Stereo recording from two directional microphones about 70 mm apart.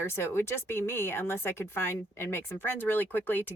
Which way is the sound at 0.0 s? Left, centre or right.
Left.